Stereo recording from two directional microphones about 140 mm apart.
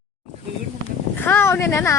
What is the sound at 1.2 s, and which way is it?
Speech, 15° left (ahead or behind).